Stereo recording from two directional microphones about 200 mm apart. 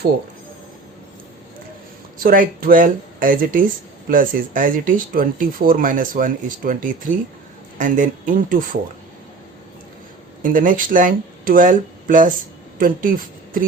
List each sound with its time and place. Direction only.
2.1 s speech: 45° right (ahead or behind)
10.4 s speech: 40° right (ahead or behind)